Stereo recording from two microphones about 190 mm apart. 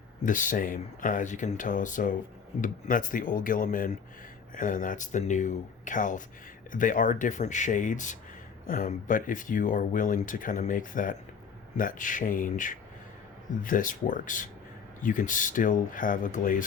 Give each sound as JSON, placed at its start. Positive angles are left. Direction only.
{"t": 0.2, "sound": "speech", "side_deg": 45}